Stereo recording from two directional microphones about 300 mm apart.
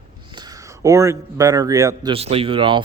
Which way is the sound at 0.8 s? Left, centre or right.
Centre.